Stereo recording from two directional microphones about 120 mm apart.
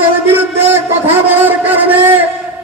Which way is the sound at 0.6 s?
20° right (ahead or behind).